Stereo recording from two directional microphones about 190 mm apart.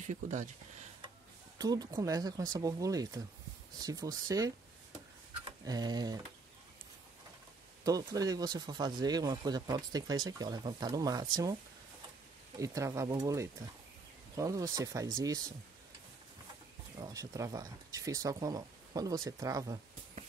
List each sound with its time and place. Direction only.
0.0 s speech: 40° right (ahead or behind)
1.6 s speech: 20° right (ahead or behind)
5.7 s speech: 20° right (ahead or behind)
7.8 s speech: 20° right (ahead or behind)
12.5 s speech: 15° right (ahead or behind)
17.0 s speech: 20° right (ahead or behind)